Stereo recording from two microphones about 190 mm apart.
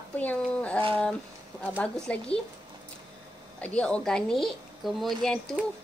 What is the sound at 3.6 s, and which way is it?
Speech, 5° left (ahead or behind).